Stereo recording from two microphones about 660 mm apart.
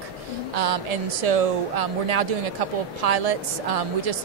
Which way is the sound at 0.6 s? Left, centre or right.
Right.